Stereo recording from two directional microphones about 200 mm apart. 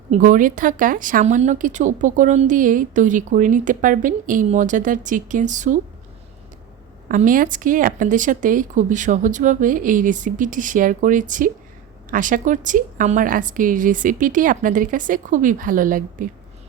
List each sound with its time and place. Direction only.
0.1 s a woman's voice: 40° right (ahead or behind)
7.1 s a woman's voice: 40° right (ahead or behind)